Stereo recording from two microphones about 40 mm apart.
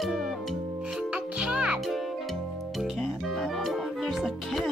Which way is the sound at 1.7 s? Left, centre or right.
Centre.